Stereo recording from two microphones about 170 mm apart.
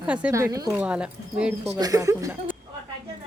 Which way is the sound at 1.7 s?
20° right (ahead or behind).